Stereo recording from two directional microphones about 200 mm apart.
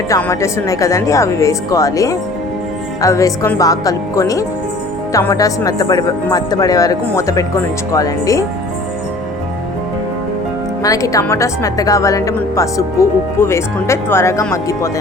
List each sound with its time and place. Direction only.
0.1 s speech: 15° left (ahead or behind)
10.8 s speech: 15° left (ahead or behind)